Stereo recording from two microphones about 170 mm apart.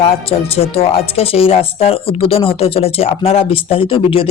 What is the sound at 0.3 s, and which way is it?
Speech, 35° left (ahead or behind).